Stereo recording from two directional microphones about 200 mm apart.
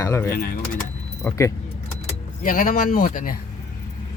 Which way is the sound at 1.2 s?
15° left (ahead or behind).